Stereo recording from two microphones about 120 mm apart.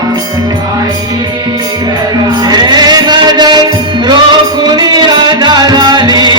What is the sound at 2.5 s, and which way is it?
Music, 35° right (ahead or behind).